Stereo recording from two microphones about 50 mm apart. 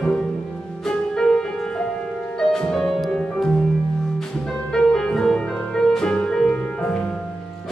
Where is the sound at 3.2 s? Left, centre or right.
Centre.